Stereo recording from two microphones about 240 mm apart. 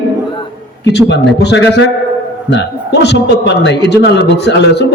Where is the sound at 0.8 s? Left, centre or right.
Left.